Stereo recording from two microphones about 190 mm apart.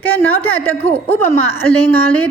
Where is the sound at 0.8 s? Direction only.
35° left (ahead or behind).